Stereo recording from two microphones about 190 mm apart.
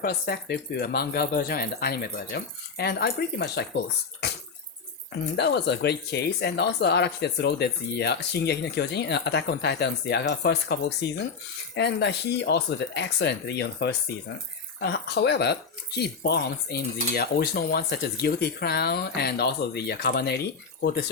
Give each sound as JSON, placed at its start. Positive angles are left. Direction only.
{"t": 0.0, "sound": "speech", "side_deg": 55}
{"t": 5.4, "sound": "speech", "side_deg": 65}